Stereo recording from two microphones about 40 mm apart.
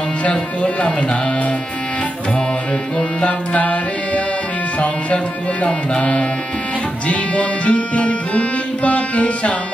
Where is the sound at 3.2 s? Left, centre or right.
Left.